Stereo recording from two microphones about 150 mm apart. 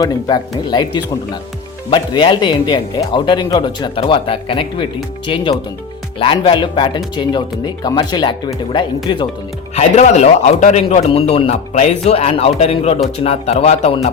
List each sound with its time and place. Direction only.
0.0 s speech: 25° left (ahead or behind)
9.7 s a man's voice: 50° left (ahead or behind)